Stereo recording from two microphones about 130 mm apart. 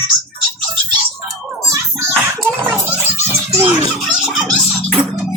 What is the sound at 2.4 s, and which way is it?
Children playing, 20° right (ahead or behind).